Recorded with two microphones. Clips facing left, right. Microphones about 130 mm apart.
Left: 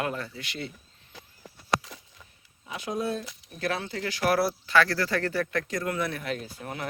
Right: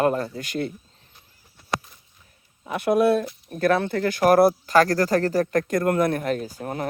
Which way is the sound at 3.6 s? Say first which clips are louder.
Right 10 dB; 55° right (ahead or behind).